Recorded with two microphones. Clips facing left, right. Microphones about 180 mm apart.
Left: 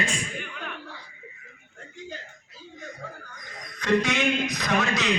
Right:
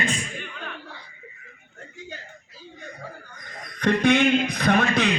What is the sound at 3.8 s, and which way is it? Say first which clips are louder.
A man's voice: right 4 dB; 55° right (ahead or behind).